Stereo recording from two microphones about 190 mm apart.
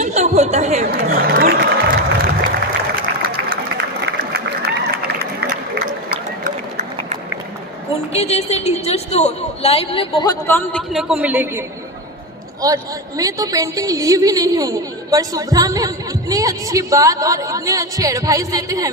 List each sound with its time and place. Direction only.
0.0 s chatter: 35° right (ahead or behind)
4.0 s a sound: 55° right (ahead or behind)
8.1 s a woman's voice: 35° left (ahead or behind)
10.4 s a man's voice: 10° left (ahead or behind); by 11.6 s 10° right (ahead or behind)
12.6 s a woman's voice: 20° right (ahead or behind)